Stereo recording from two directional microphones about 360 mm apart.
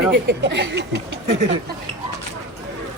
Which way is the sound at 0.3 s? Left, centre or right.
Right.